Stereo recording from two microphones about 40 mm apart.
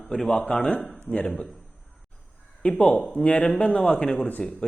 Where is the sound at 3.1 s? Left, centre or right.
Left.